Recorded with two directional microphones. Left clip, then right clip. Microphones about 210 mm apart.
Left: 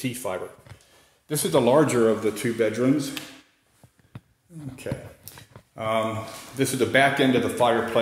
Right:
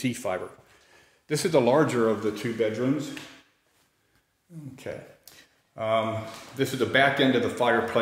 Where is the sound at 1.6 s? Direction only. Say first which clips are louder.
Left 5 dB; 5° left (ahead or behind).